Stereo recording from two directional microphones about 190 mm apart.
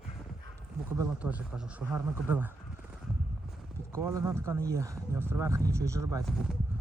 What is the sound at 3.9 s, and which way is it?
Speech, 15° right (ahead or behind).